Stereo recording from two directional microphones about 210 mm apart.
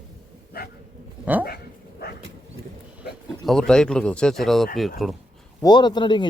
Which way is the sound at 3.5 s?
5° left (ahead or behind).